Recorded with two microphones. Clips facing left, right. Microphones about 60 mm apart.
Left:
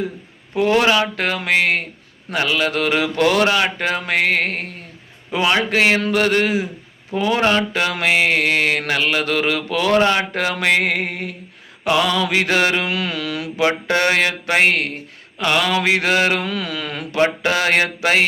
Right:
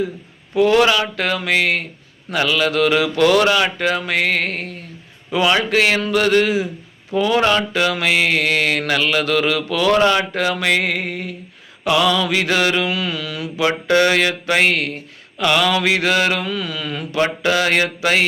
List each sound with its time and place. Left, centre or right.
0.5 s speech: left
5.3 s mantra: left
5.7 s speech: left
7.1 s mantra: left
10.2 s speech: left
11.9 s speech: left
13.7 s mantra: left
14.0 s speech: left
17.2 s speech: left